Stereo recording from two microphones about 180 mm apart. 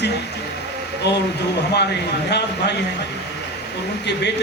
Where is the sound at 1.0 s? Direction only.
70° left (ahead or behind).